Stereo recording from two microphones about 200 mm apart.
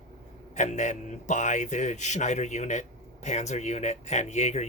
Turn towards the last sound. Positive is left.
turn(degrees=35)  # may be behind; listen again after turning